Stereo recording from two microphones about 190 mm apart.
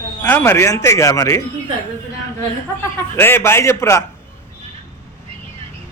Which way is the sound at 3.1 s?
10° left (ahead or behind).